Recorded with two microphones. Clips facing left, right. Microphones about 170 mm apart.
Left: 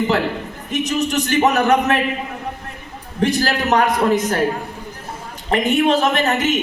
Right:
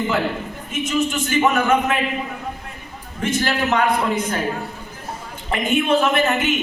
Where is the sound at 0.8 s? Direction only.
40° left (ahead or behind).